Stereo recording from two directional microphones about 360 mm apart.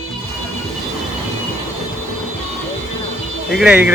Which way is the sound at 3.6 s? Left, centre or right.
Centre.